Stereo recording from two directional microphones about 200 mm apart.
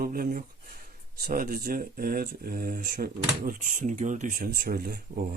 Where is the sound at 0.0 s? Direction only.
45° right (ahead or behind).